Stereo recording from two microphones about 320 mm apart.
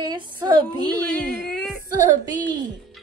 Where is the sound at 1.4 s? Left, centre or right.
Centre.